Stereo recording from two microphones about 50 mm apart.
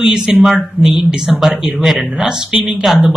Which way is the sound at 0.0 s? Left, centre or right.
Centre.